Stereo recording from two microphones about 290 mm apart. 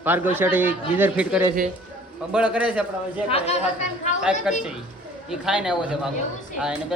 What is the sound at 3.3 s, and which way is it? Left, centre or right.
Speech, left.